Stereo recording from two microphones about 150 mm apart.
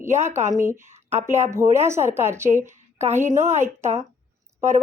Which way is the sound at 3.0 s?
50° right (ahead or behind).